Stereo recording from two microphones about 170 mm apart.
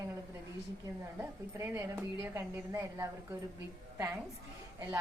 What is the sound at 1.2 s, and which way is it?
A woman's voice, 15° right (ahead or behind).